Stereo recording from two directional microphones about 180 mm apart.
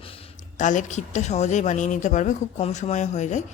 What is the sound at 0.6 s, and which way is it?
A man's voice, 45° left (ahead or behind).